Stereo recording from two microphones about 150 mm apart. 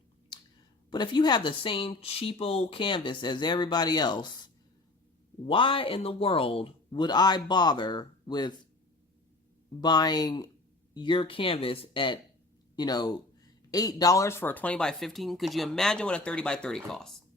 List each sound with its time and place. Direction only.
0.3 s chewing: 30° left (ahead or behind)
0.9 s speech: 30° left (ahead or behind)
9.8 s speech: 25° left (ahead or behind); by 17.2 s 5° left (ahead or behind)